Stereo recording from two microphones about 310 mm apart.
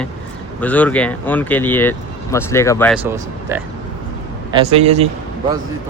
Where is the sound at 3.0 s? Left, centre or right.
Centre.